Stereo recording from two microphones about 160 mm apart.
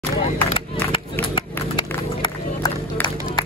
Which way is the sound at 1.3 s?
30° left (ahead or behind).